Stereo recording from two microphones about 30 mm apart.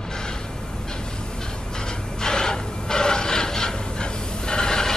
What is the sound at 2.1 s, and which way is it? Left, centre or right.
Gasp, left.